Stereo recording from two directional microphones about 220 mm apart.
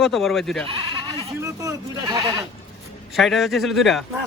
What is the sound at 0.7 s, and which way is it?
Goat, 25° right (ahead or behind).